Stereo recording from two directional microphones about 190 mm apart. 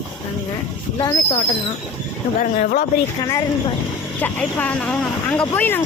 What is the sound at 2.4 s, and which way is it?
Speech, 50° left (ahead or behind).